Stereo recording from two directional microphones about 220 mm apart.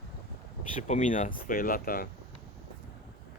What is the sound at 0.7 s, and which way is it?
Speech, 35° left (ahead or behind).